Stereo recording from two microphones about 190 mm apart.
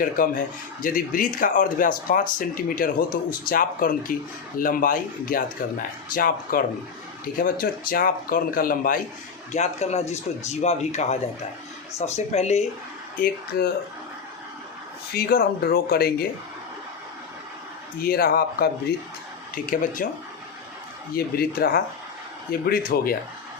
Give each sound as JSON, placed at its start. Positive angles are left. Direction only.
{"t": 0.0, "sound": "speech", "side_deg": 45}
{"t": 9.5, "sound": "speech", "side_deg": 35}
{"t": 13.1, "sound": "speech", "side_deg": 50}
{"t": 15.1, "sound": "speech", "side_deg": 50}
{"t": 18.0, "sound": "speech", "side_deg": 50}
{"t": 21.2, "sound": "speech", "side_deg": 50}